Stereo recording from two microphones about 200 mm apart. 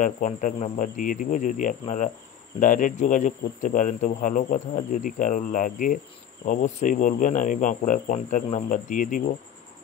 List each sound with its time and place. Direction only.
0.0 s speech: 40° left (ahead or behind)